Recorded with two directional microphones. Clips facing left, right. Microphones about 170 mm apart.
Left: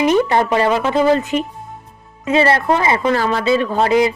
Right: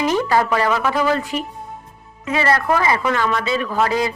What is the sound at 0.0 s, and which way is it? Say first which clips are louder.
Speech: left 4 dB; 20° left (ahead or behind).